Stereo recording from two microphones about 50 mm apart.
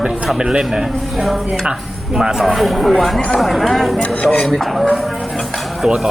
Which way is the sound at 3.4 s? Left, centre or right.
Centre.